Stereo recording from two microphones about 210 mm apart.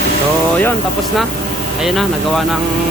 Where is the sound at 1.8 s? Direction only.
Centre (ahead or behind).